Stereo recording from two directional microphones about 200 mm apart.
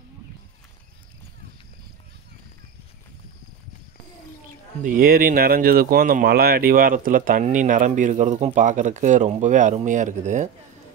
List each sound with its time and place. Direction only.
4.8 s speech: 45° right (ahead or behind)